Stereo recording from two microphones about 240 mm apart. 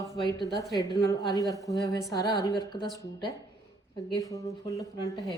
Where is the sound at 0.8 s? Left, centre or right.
Centre.